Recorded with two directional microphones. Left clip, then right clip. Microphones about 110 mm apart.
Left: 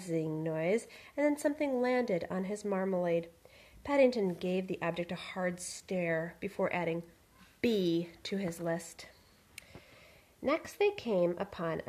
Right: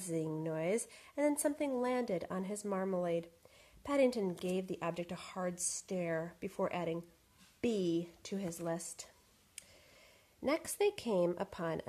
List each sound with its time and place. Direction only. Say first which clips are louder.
0.0 s a woman's voice: left 4 dB; 35° right (ahead or behind)
10.4 s speech: left 3 dB; 55° right (ahead or behind)